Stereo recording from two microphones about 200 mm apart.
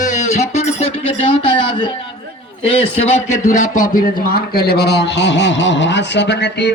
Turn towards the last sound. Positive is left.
turn(degrees=60)  # may be behind; listen again after turning